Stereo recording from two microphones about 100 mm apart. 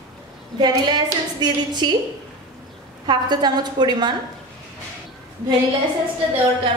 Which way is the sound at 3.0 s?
45° right (ahead or behind).